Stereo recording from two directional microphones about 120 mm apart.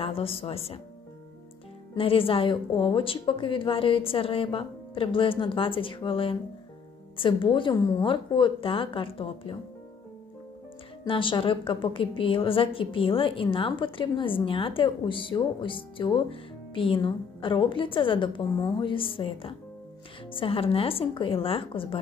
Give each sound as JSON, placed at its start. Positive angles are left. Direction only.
{"t": 0.0, "sound": "a woman's voice", "side_deg": 50}
{"t": 2.0, "sound": "a woman's voice", "side_deg": 50}
{"t": 11.1, "sound": "a woman's voice", "side_deg": 45}